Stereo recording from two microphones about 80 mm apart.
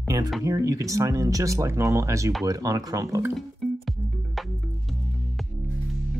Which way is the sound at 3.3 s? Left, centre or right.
Centre.